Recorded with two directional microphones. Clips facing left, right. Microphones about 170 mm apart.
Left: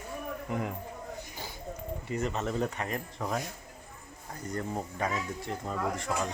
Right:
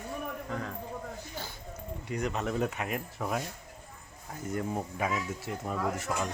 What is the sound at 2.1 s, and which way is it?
Speech, centre (ahead or behind).